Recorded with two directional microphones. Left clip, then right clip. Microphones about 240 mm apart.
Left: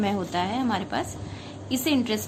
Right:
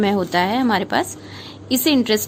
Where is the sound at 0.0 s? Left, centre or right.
Right.